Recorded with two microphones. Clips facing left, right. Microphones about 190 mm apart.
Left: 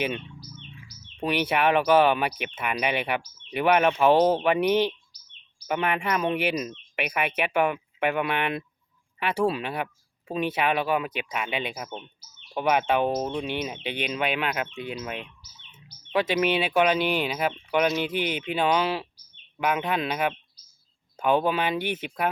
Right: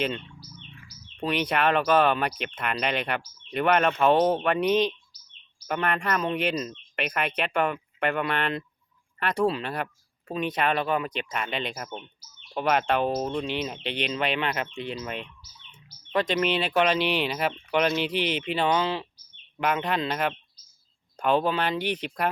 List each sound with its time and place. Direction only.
1.1 s speech: 10° left (ahead or behind)